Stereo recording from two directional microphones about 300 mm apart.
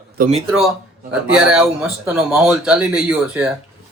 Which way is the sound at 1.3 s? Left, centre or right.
Centre.